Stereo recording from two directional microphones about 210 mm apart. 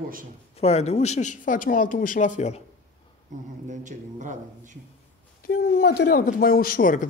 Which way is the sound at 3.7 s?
35° right (ahead or behind).